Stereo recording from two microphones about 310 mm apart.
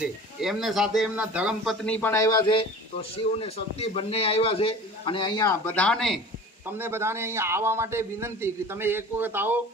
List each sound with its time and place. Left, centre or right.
0.0 s a man's voice: centre